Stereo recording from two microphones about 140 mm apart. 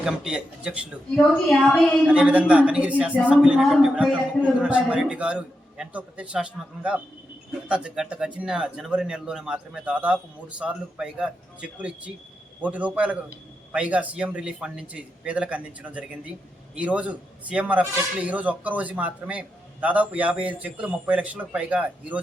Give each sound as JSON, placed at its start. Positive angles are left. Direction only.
{"t": 0.0, "sound": "a man's voice", "side_deg": -5}